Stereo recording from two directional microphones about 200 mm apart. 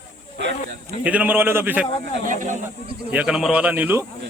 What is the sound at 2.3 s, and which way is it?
Speech, 40° right (ahead or behind).